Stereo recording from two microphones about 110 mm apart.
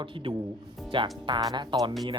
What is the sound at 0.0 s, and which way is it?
Speech, 50° right (ahead or behind).